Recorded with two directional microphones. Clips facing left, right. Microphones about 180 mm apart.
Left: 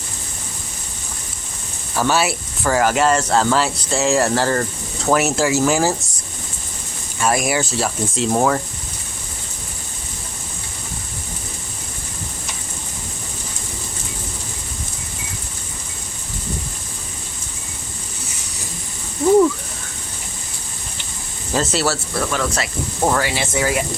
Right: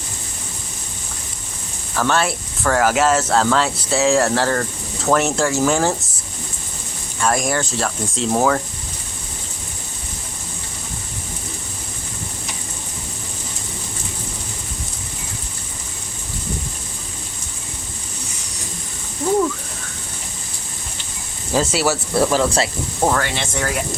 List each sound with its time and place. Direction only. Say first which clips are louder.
2.0 s speech: left 1 dB; 5° left (ahead or behind)
7.2 s speech: left 1 dB; 5° left (ahead or behind)
21.5 s speech: right 1 dB; 10° right (ahead or behind)
22.1 s speech: right 5 dB; 30° right (ahead or behind)
23.0 s speech: left 1 dB; 5° left (ahead or behind)